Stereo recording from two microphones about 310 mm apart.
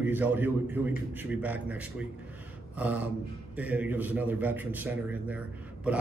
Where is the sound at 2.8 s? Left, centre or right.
Centre.